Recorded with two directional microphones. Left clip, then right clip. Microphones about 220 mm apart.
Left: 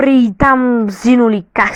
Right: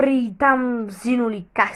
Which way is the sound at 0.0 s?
45° left (ahead or behind).